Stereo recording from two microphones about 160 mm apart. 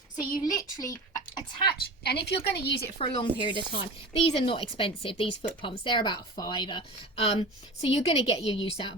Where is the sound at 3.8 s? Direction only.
35° left (ahead or behind).